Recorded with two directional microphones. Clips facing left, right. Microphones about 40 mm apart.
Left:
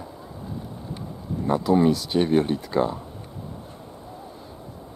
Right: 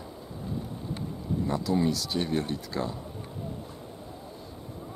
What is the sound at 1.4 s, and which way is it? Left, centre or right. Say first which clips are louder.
Speech: left 8 dB; left.